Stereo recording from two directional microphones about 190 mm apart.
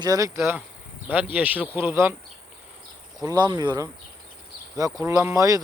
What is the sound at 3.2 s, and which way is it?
Speech, 20° right (ahead or behind).